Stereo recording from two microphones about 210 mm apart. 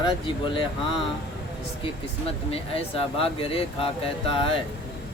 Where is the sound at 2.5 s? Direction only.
25° left (ahead or behind).